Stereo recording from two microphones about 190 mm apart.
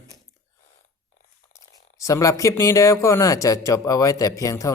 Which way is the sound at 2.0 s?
15° left (ahead or behind).